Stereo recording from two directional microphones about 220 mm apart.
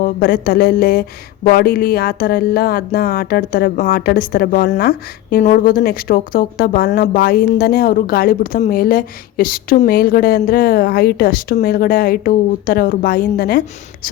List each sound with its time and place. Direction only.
0.0 s speech: 45° left (ahead or behind)